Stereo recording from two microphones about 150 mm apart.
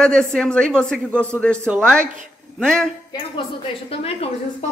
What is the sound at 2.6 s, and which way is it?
Speech, 5° left (ahead or behind).